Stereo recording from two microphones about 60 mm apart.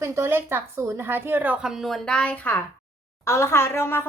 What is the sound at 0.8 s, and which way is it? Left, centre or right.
Speech, right.